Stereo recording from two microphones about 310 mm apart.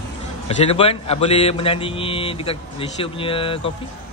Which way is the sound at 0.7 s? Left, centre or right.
Centre.